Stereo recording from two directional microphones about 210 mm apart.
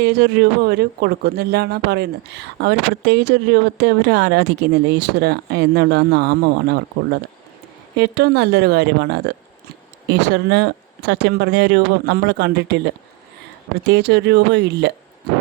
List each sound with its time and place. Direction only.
0.0 s a man's voice: 50° right (ahead or behind)
7.9 s a man's voice: 55° right (ahead or behind)